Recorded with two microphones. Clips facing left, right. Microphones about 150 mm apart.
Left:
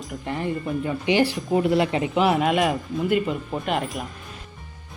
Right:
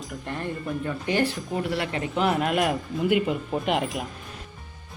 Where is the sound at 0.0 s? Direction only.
Centre (ahead or behind).